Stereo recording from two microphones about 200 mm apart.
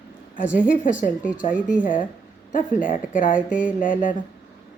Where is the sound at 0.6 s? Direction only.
40° left (ahead or behind).